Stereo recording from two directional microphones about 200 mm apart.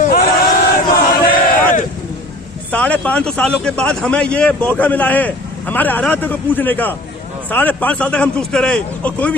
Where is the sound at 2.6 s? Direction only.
5° left (ahead or behind).